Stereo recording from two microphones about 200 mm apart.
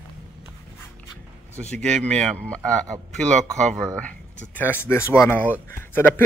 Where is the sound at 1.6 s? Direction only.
5° left (ahead or behind).